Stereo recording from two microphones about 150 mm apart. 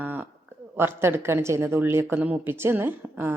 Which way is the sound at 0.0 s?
10° right (ahead or behind).